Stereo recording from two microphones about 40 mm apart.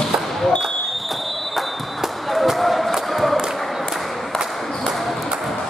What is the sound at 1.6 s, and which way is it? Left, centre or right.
Basketball bounce, centre.